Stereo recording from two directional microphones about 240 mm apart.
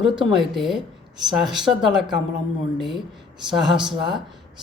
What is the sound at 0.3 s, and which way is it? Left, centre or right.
Speech, centre.